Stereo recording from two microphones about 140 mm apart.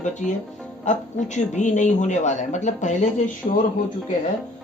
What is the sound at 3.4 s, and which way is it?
Speech, 45° left (ahead or behind).